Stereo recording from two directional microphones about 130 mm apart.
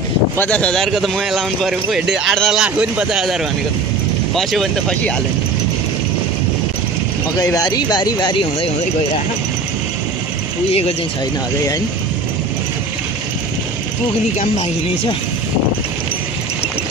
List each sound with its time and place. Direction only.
0.4 s speech: 10° left (ahead or behind)
4.4 s speech: centre (ahead or behind)
7.5 s speech: 30° left (ahead or behind)
10.7 s speech: 50° left (ahead or behind)